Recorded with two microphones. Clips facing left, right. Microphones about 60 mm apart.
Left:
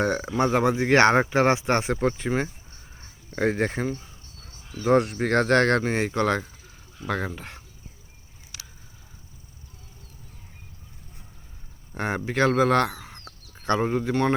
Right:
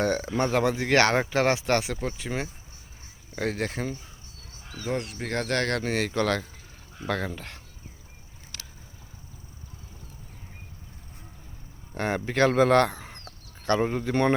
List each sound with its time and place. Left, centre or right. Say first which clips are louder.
0.0 s speech: left 2 dB; centre
1.9 s speech: left 7 dB; left
4.9 s speech: left 10 dB; left
5.2 s speech: left 7 dB; left; by 7.6 s centre
8.5 s a sound: even; centre
11.9 s speech: even; centre